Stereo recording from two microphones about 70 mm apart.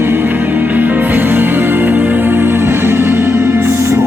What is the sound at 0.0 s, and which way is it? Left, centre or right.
Music, right.